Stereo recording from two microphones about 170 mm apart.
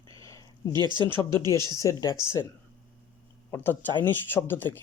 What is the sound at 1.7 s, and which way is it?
Speech, 20° left (ahead or behind).